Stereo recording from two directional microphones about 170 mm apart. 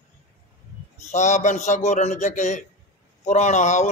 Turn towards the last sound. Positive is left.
turn(degrees=45)  # may be behind; listen again after turning